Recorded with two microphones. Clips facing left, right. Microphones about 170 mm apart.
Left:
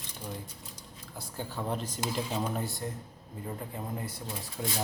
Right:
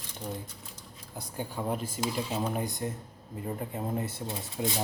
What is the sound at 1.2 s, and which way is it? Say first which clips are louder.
Speech: right 2 dB; 15° right (ahead or behind).